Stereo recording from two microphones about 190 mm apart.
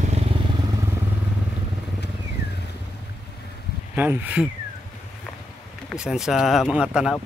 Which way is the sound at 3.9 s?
10° right (ahead or behind).